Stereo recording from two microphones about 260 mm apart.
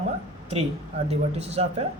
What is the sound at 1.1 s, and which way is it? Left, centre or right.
Speech, right.